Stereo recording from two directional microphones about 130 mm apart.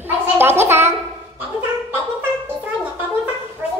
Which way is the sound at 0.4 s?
20° right (ahead or behind).